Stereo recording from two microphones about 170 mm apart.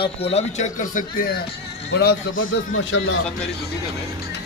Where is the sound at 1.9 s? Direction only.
70° left (ahead or behind).